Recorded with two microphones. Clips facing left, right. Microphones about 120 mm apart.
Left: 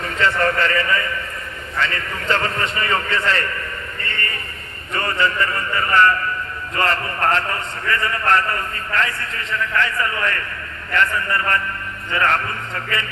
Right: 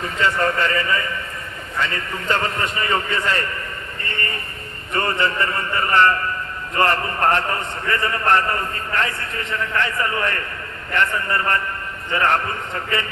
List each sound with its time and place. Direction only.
0.2 s a man's voice: 20° right (ahead or behind)